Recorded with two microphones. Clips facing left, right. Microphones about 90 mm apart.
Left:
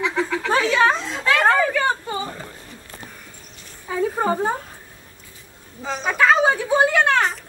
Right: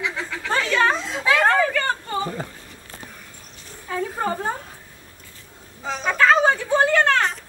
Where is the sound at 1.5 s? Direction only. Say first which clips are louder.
Left 2 dB; 15° left (ahead or behind).